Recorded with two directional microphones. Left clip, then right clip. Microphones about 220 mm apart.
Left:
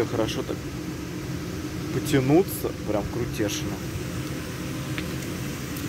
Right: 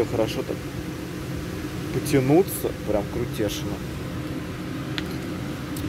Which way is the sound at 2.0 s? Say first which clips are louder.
Right 2 dB; centre (ahead or behind).